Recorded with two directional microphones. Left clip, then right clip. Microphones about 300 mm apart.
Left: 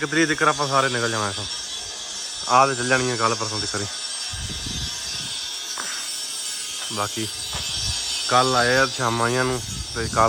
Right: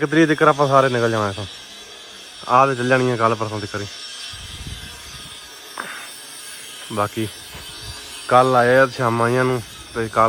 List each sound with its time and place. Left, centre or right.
0.0 s speech: centre
2.5 s speech: centre
6.9 s speech: centre
8.3 s speech: centre